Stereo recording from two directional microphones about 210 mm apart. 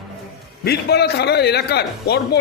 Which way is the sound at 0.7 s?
50° left (ahead or behind).